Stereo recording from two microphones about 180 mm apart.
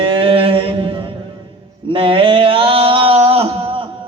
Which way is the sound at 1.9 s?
30° right (ahead or behind).